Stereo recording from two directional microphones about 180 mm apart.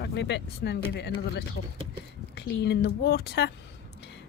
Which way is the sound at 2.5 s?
70° left (ahead or behind).